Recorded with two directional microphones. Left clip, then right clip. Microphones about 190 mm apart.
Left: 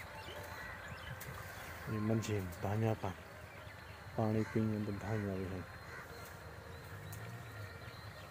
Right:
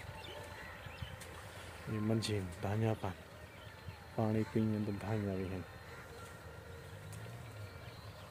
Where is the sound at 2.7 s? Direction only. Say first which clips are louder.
Even; 5° right (ahead or behind).